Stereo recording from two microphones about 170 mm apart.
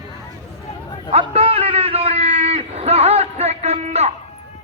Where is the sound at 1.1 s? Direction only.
35° right (ahead or behind).